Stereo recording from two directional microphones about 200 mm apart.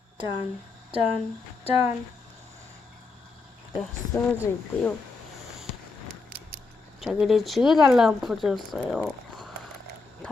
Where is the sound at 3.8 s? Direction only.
10° left (ahead or behind).